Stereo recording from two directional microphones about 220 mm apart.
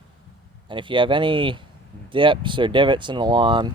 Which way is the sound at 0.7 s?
20° right (ahead or behind).